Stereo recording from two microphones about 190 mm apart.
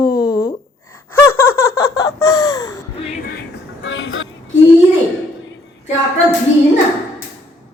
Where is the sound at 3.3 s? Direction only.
70° left (ahead or behind); by 4.4 s 90° left.